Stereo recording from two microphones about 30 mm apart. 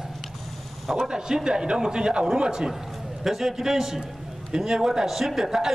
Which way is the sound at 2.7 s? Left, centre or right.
Centre.